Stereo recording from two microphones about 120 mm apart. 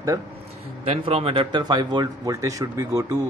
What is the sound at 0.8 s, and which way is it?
Speech, 55° right (ahead or behind).